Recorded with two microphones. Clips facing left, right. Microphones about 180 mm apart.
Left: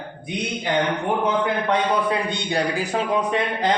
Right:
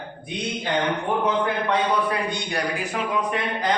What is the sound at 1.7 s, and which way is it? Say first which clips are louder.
A man's voice: left 2 dB; 25° left (ahead or behind).